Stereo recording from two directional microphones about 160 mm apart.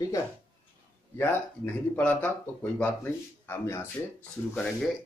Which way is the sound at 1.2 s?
10° left (ahead or behind).